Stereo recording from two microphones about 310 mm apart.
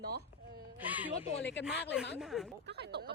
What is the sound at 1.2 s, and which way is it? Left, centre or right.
Speech, centre.